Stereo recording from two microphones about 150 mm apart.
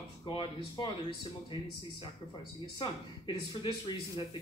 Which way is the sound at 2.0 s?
30° left (ahead or behind).